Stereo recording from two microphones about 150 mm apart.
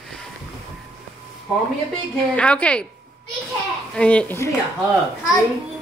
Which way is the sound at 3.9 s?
5° left (ahead or behind).